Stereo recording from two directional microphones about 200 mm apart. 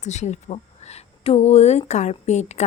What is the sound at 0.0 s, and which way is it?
Speech, 35° left (ahead or behind).